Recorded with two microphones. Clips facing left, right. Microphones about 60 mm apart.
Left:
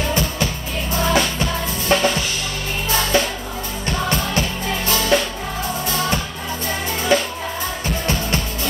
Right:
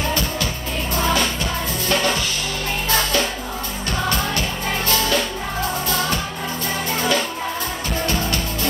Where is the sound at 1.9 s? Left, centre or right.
Left.